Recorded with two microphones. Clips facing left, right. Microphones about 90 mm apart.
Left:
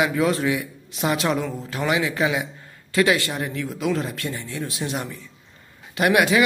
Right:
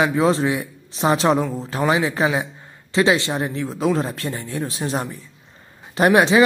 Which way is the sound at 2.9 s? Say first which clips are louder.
Right 2 dB; 25° right (ahead or behind).